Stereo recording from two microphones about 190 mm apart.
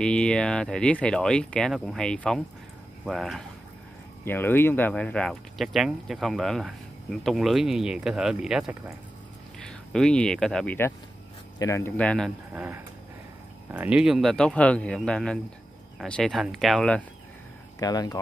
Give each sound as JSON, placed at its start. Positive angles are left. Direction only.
{"t": 0.0, "sound": "speech", "side_deg": 5}
{"t": 4.2, "sound": "speech", "side_deg": 10}
{"t": 12.5, "sound": "speech", "side_deg": -10}
{"t": 17.7, "sound": "speech", "side_deg": 20}